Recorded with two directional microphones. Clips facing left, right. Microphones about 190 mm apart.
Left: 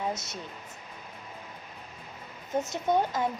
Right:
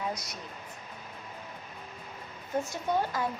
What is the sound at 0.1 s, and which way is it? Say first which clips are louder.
Speech: left 2 dB; 25° left (ahead or behind).